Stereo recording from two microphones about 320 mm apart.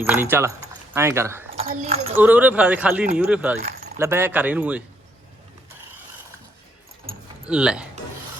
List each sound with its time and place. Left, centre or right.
0.0 s speech: centre
1.5 s speech: centre
2.1 s speech: centre
3.6 s keys jangling: right
3.9 s speech: centre
7.4 s speech: centre